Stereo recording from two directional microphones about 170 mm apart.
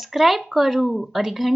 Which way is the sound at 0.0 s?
Centre (ahead or behind).